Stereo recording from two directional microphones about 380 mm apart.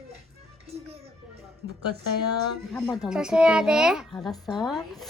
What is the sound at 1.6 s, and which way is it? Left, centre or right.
Music, left.